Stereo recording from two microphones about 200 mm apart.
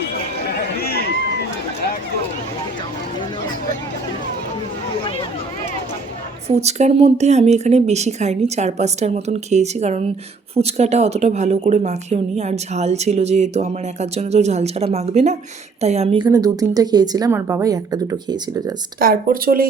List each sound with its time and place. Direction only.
0.5 s a sound: 50° left (ahead or behind)
6.5 s a woman's voice: 35° right (ahead or behind)
18.9 s speech: 45° right (ahead or behind)